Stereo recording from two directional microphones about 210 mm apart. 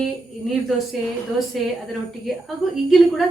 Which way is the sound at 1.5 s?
Centre (ahead or behind).